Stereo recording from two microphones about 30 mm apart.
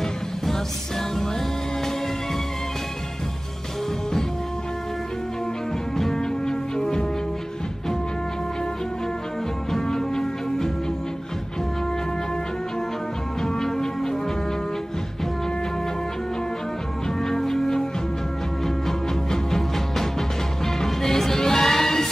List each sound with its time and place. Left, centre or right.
5.9 s music: centre
9.7 s music: centre
13.4 s music: centre
17.2 s music: centre
18.9 s music: centre